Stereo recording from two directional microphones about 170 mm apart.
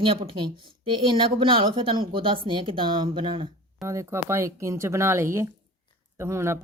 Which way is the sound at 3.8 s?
15° right (ahead or behind).